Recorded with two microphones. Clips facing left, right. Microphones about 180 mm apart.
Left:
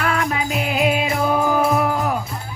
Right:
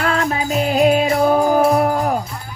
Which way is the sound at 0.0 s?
30° right (ahead or behind).